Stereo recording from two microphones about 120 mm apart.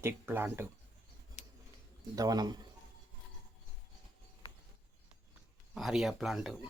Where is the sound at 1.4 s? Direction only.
80° left.